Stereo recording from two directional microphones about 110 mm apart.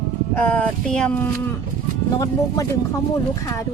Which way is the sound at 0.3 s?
15° left (ahead or behind).